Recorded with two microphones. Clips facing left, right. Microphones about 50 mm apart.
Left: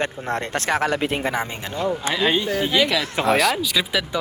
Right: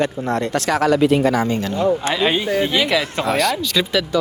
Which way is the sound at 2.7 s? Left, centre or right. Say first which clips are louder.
Right 2 dB; centre.